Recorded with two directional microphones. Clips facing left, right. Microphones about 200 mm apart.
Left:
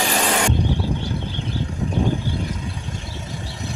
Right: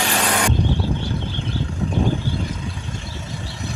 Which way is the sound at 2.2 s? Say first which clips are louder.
Even; centre (ahead or behind).